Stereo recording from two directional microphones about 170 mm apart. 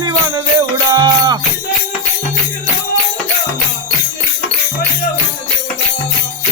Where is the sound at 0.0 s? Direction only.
25° right (ahead or behind).